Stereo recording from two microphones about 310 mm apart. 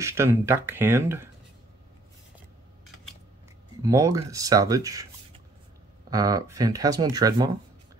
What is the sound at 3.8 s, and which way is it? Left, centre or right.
Speech, centre.